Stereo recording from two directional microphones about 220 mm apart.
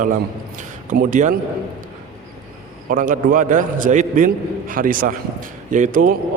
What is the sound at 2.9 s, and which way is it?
A man's voice, 40° right (ahead or behind).